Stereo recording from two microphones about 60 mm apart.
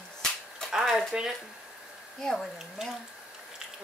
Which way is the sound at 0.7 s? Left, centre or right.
Centre.